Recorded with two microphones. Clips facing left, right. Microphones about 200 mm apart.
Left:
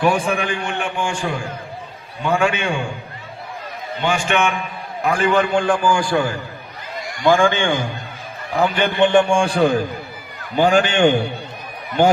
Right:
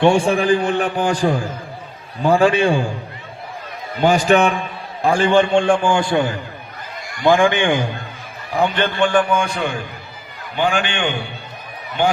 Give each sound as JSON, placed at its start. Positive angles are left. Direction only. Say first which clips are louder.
{"t": 0.0, "sound": "a man's voice", "louder": "right 4 dB", "side_deg": -30}
{"t": 4.0, "sound": "a man's voice", "louder": "right 6 dB", "side_deg": -40}
{"t": 8.5, "sound": "a man's voice", "louder": "left 1 dB", "side_deg": 10}